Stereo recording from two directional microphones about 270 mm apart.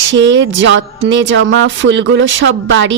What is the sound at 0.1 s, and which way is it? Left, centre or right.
Speech, right.